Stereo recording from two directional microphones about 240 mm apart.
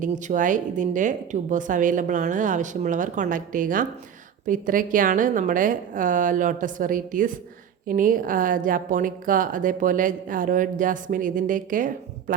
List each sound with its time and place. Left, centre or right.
0.0 s a woman's voice: right